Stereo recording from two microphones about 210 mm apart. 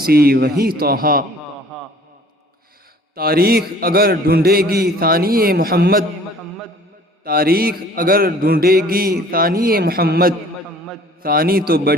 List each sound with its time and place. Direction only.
0.0 s a man's voice: 45° right (ahead or behind)
3.2 s a man's voice: 45° right (ahead or behind)
7.3 s a man's voice: 45° right (ahead or behind)